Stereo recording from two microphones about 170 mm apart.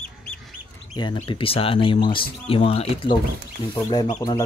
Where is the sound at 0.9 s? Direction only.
30° left (ahead or behind).